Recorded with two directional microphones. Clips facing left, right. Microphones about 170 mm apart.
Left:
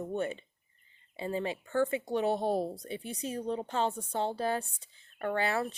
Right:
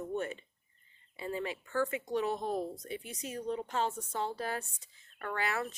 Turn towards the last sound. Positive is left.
turn(degrees=30)  # may be behind; listen again after turning